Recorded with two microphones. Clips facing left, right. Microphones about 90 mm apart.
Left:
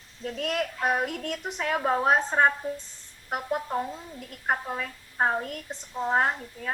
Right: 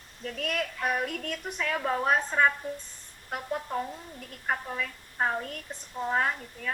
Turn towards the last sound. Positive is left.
turn(degrees=35)  # may be behind; listen again after turning